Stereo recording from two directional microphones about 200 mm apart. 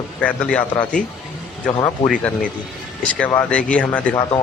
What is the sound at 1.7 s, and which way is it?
Speech, 25° left (ahead or behind).